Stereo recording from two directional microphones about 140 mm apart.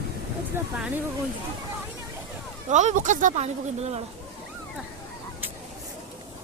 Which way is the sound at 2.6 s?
60° right (ahead or behind).